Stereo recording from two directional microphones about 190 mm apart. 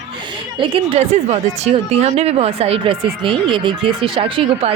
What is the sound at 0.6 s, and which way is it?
A woman's voice, 30° right (ahead or behind).